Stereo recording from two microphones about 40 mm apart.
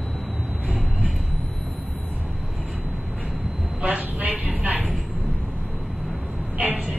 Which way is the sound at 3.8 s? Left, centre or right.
Right.